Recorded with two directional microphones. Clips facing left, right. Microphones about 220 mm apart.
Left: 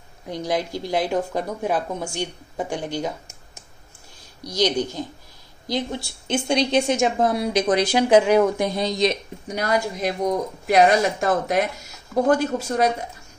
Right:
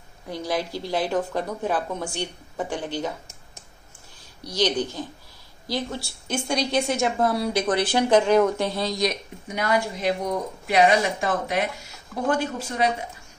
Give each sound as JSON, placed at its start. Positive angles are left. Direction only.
{"t": 0.3, "sound": "a woman's voice", "side_deg": 15}
{"t": 4.6, "sound": "a woman's voice", "side_deg": 10}
{"t": 9.5, "sound": "a woman's voice", "side_deg": 40}